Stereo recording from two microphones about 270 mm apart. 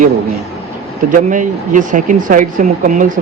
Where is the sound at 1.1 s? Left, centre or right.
Right.